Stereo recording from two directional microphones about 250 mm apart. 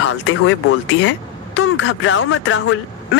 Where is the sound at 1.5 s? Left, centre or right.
Left.